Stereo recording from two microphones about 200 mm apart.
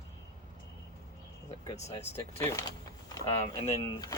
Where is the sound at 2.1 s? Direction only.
10° left (ahead or behind).